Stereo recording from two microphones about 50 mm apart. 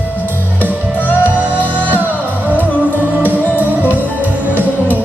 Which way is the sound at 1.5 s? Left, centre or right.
Left.